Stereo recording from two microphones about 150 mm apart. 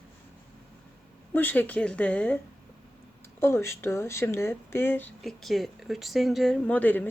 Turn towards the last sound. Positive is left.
turn(degrees=10)  # may be behind; listen again after turning